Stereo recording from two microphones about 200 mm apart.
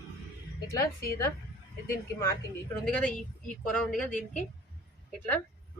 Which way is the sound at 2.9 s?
5° left (ahead or behind).